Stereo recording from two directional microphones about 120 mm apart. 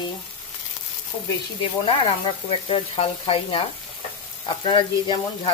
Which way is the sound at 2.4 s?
55° left (ahead or behind).